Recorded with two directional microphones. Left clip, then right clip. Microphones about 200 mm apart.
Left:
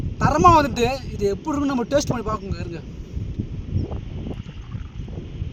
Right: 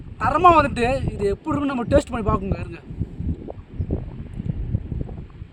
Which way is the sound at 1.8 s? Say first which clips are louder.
Right 4 dB; 25° right (ahead or behind).